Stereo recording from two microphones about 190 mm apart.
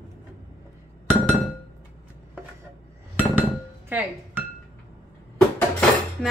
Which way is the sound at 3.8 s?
10° right (ahead or behind).